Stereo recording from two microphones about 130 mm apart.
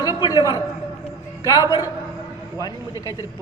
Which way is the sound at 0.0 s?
30° left (ahead or behind).